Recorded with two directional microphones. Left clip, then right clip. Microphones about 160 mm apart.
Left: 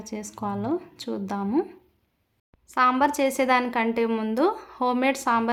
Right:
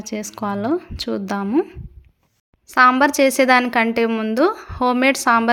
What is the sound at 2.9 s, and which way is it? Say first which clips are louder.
A woman's voice: right 7 dB; 25° right (ahead or behind).